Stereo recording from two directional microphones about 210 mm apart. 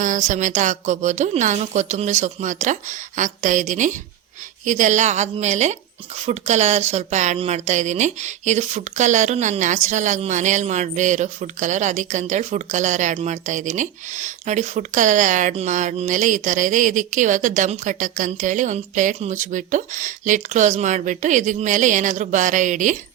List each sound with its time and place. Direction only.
0.0 s a woman's voice: 35° right (ahead or behind)